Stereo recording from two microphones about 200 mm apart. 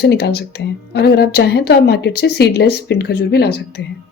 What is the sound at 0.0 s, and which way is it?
A woman's voice, 55° left (ahead or behind).